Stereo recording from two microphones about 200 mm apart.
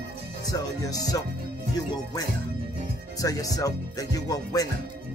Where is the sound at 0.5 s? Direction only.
20° left (ahead or behind).